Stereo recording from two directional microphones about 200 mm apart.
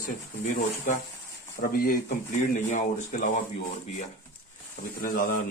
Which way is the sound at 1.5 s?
45° left (ahead or behind).